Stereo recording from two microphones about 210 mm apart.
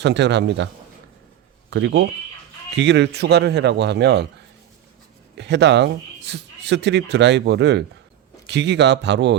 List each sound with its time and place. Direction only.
0.0 s speech: 55° right (ahead or behind)
1.7 s speech: 55° right (ahead or behind)
5.4 s speech: 55° right (ahead or behind)